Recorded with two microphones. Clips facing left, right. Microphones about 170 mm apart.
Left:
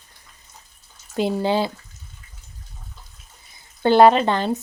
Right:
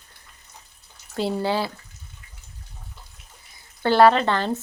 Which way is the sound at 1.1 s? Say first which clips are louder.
Left 3 dB; 15° left (ahead or behind).